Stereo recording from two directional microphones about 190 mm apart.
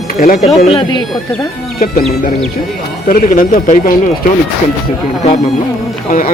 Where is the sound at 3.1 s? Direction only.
50° left (ahead or behind).